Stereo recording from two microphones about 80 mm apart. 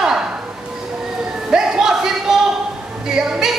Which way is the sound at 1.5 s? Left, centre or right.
Centre.